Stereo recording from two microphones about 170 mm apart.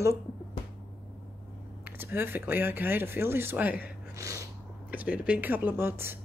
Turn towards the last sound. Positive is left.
turn(degrees=-15)  # may be behind; listen again after turning